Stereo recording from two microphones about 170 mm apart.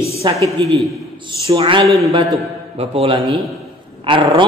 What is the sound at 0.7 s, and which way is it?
Speech, centre (ahead or behind).